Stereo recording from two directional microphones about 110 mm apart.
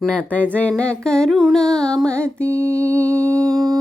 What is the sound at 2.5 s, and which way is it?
Mantra, 25° right (ahead or behind).